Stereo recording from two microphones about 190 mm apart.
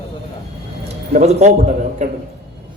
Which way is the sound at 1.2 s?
35° right (ahead or behind).